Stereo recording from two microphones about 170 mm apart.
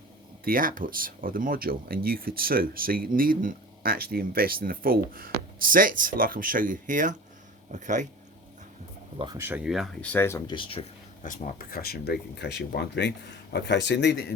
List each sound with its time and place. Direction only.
0.4 s speech: 55° right (ahead or behind)
9.1 s speech: 25° right (ahead or behind)
9.4 s speech: 10° right (ahead or behind); by 10.5 s 15° left (ahead or behind)
10.5 s speech: 30° left (ahead or behind)
11.2 s speech: 55° left (ahead or behind); by 14.2 s 85° left